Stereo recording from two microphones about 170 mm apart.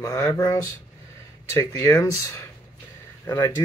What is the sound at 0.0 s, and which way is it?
Speech, 20° left (ahead or behind).